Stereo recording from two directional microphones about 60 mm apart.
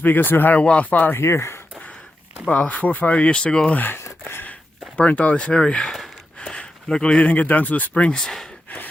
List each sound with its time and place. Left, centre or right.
0.0 s speech: left
0.6 s speech: left
1.1 s speech: left
2.5 s speech: left
3.8 s speech: left
4.9 s speech: left
8.2 s speech: centre